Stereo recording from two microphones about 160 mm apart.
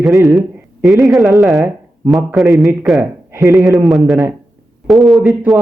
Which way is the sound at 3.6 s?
Centre (ahead or behind).